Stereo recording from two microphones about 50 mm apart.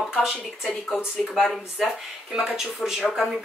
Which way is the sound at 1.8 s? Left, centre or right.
Centre.